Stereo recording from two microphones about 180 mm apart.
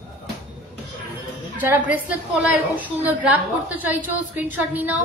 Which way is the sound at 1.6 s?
10° right (ahead or behind).